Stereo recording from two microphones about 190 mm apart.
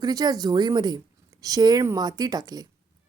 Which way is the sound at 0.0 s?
20° right (ahead or behind).